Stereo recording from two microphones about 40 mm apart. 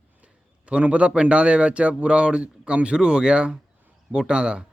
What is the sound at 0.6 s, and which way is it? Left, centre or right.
Speech, right.